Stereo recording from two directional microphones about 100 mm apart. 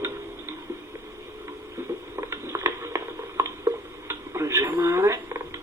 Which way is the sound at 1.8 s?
25° right (ahead or behind).